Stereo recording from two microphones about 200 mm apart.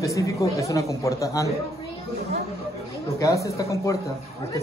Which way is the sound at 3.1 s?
15° left (ahead or behind).